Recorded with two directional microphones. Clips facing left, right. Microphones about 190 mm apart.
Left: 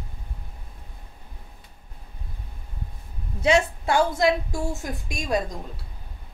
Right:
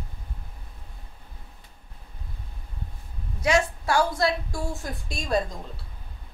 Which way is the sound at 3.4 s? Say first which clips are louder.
Left 2 dB; 25° left (ahead or behind).